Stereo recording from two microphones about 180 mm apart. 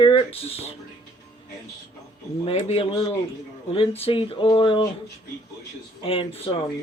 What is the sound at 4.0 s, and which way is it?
Speech, 30° left (ahead or behind).